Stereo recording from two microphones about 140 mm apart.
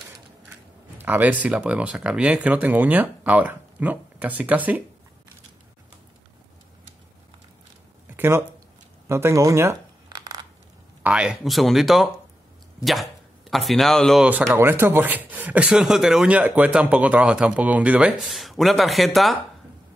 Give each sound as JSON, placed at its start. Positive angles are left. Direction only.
{"t": 0.9, "sound": "speech", "side_deg": -15}
{"t": 8.2, "sound": "speech", "side_deg": -15}
{"t": 9.1, "sound": "a sound", "side_deg": -20}
{"t": 11.0, "sound": "speech", "side_deg": -10}
{"t": 14.4, "sound": "speech", "side_deg": -15}